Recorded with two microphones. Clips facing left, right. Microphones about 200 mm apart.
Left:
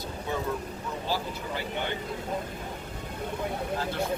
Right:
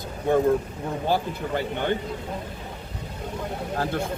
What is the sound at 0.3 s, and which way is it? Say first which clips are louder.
Speech: right 12 dB; 50° right (ahead or behind).